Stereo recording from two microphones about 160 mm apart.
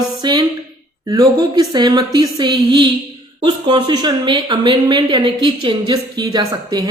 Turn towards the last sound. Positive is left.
turn(degrees=-25)  # may be behind; listen again after turning